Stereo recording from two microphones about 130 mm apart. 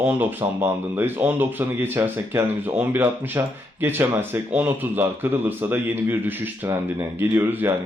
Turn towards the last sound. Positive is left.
turn(degrees=-15)  # may be behind; listen again after turning